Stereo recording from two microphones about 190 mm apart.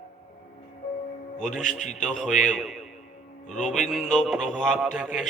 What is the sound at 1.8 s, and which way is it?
Speech, 40° left (ahead or behind).